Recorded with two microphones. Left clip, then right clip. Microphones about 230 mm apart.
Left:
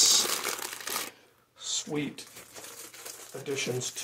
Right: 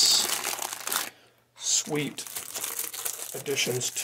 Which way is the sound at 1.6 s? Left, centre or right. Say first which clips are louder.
Right 6 dB; right.